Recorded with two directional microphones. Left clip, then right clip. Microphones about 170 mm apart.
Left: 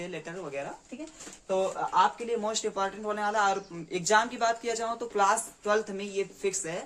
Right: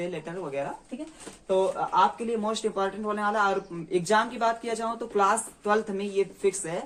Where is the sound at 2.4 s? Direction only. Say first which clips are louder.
Right 3 dB; 25° left (ahead or behind).